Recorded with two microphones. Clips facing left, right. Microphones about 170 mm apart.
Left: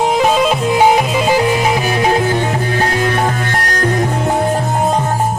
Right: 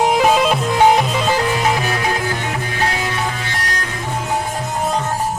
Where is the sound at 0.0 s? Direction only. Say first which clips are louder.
Left 1 dB; 5° right (ahead or behind); by 2.8 s 35° left (ahead or behind).